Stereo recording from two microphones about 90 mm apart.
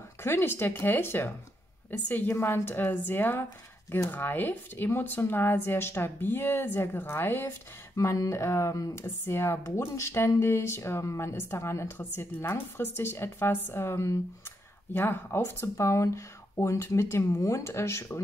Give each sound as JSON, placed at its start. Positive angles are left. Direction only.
{"t": 0.2, "sound": "speech", "side_deg": 25}